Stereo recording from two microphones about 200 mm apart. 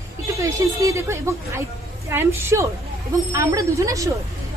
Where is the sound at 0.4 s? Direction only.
15° right (ahead or behind).